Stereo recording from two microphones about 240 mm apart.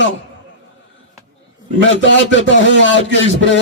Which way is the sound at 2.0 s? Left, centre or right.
Left.